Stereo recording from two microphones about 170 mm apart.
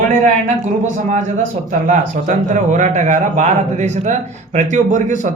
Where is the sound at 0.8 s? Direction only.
45° right (ahead or behind).